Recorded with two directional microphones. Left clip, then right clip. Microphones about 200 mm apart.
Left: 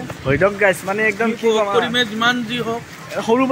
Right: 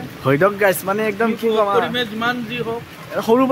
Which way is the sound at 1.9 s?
35° left (ahead or behind).